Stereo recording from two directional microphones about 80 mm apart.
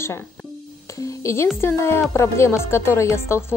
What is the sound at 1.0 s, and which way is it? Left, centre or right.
Music, left.